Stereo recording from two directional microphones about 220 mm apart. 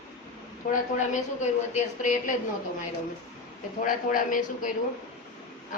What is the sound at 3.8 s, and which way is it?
Speech, 35° left (ahead or behind).